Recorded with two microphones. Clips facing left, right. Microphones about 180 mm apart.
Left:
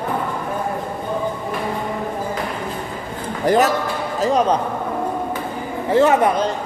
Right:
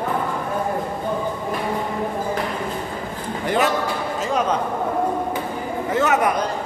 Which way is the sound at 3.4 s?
40° left (ahead or behind).